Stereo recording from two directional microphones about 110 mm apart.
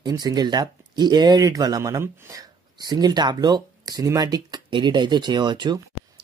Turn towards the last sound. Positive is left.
turn(degrees=-40)  # may be behind; listen again after turning